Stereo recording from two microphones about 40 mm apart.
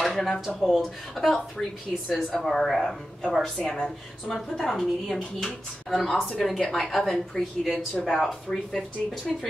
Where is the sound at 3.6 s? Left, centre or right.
Left.